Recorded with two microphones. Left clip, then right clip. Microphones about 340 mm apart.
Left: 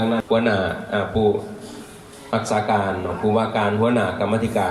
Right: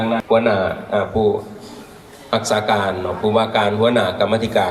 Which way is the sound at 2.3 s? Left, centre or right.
Right.